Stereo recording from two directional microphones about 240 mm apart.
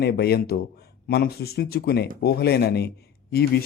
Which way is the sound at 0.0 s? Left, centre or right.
Left.